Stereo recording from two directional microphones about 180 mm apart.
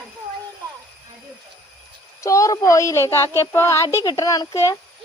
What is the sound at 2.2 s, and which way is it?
A woman's voice, 15° left (ahead or behind).